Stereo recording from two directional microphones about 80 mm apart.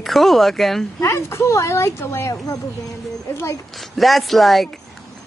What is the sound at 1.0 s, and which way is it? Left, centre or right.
Speech, left.